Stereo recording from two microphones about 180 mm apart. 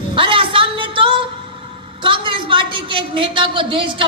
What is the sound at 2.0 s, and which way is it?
Speech, 30° right (ahead or behind).